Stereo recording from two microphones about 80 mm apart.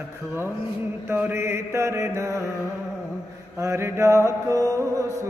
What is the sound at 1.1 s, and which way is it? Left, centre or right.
Mantra, right.